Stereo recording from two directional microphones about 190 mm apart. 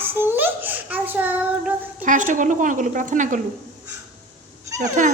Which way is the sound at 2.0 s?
40° right (ahead or behind).